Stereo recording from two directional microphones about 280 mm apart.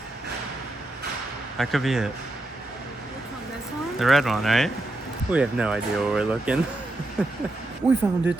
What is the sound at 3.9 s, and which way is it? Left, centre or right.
Speech, centre.